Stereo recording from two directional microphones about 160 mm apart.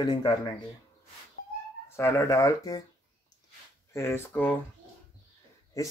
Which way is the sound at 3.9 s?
15° left (ahead or behind).